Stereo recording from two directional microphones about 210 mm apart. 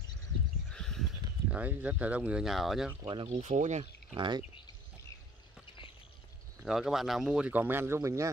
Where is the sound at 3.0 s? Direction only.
25° right (ahead or behind).